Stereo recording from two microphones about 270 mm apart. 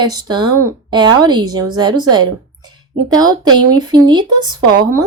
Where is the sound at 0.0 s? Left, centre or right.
Centre.